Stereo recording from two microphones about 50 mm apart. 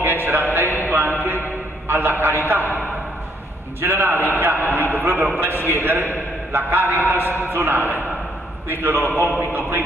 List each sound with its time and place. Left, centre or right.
0.0 s a sound: right
1.9 s a man's voice: right
3.8 s a man's voice: right